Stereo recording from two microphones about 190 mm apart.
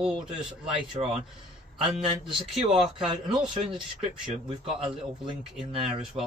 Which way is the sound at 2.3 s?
Centre (ahead or behind).